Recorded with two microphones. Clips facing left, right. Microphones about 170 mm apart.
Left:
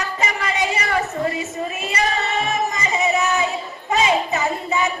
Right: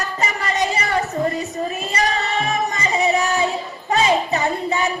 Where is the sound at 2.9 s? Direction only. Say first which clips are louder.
Right 1 dB; 35° right (ahead or behind).